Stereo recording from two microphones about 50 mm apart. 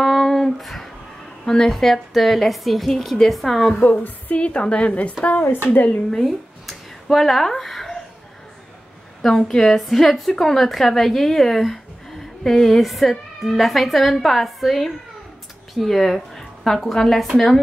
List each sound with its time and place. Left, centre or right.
0.0 s a sound: centre
1.4 s a woman's voice: centre
3.8 s a woman's voice: left
5.5 s speech: left
5.9 s speech: centre
6.2 s a sound: centre
9.5 s a woman's voice: centre